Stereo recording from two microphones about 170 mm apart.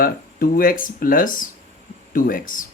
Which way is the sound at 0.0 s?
55° left (ahead or behind).